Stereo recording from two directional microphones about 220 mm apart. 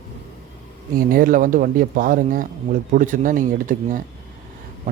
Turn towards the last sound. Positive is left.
turn(degrees=-35)  # may be behind; listen again after turning